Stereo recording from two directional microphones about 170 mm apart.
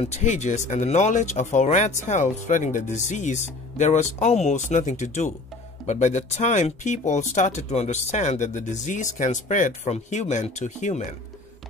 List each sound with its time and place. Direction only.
0.0 s speech: 45° left (ahead or behind)